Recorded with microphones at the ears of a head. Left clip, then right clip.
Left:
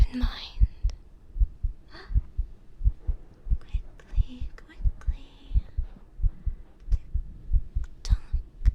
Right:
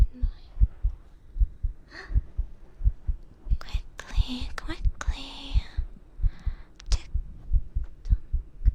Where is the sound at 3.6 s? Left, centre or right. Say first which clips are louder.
Right 10 dB; right.